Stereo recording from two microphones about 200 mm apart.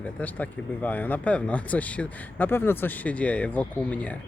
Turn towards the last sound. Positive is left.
turn(degrees=5)  # may be behind; listen again after turning